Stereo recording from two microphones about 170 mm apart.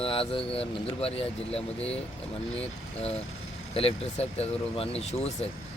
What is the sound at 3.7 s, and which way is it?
Speech, 35° left (ahead or behind).